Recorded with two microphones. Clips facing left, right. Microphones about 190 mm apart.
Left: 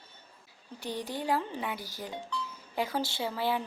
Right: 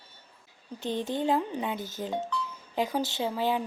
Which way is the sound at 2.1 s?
50° right (ahead or behind).